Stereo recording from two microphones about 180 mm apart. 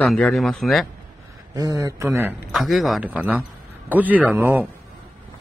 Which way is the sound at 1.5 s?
20° right (ahead or behind).